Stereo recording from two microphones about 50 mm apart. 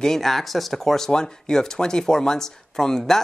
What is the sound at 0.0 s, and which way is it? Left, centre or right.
Speech, centre.